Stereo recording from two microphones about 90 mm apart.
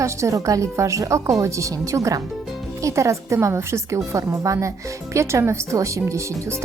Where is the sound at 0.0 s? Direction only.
35° right (ahead or behind).